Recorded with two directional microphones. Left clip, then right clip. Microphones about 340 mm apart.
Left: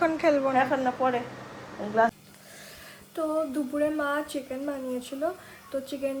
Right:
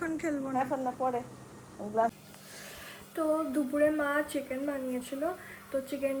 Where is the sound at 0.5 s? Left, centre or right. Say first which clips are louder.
Left 7 dB; left.